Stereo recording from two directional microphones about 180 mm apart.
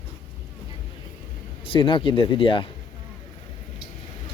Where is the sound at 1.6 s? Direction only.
30° left (ahead or behind).